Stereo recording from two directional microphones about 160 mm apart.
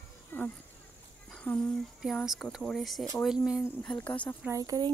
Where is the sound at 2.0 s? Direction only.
Centre (ahead or behind).